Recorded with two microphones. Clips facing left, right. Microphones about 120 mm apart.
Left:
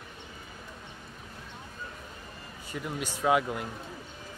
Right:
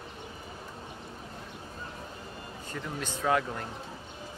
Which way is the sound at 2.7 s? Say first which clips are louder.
Left 2 dB; 10° left (ahead or behind).